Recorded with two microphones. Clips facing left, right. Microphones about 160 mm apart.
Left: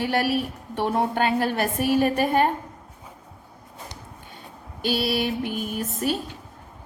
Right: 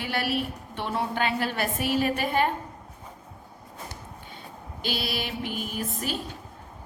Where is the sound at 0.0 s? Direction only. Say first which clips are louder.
Left 5 dB; 45° left (ahead or behind).